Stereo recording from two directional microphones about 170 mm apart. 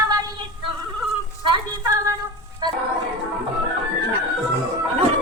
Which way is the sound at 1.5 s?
20° right (ahead or behind).